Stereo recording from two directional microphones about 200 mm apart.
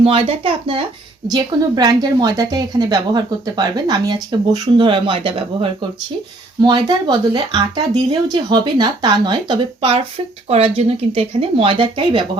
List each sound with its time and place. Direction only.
0.0 s a woman's voice: 30° right (ahead or behind)
6.6 s a woman's voice: 20° right (ahead or behind)